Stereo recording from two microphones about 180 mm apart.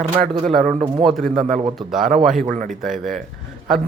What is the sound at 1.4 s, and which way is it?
Speech, 45° right (ahead or behind).